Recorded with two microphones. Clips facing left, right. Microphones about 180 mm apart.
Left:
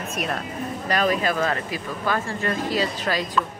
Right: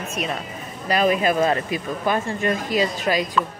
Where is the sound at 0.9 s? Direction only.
15° right (ahead or behind).